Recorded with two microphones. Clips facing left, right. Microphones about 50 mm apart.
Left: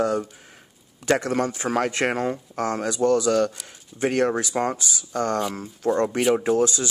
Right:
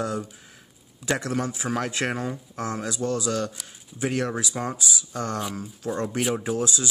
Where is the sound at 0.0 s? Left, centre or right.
Left.